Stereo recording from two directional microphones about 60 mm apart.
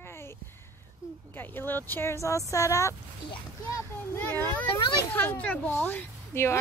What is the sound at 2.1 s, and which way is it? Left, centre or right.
Speech, left.